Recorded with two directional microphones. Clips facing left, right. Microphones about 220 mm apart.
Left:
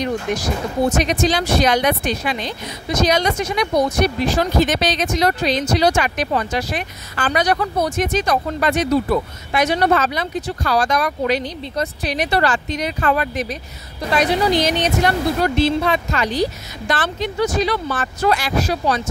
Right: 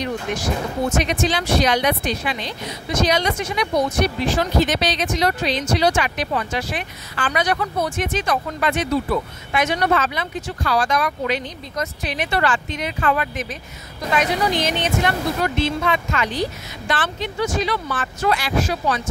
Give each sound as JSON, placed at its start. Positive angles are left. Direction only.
{"t": 0.0, "sound": "speech", "side_deg": 35}